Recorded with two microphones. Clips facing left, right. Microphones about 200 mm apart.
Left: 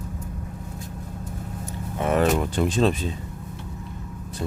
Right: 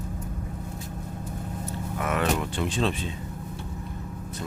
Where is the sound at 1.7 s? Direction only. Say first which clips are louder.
Left 5 dB; 25° left (ahead or behind).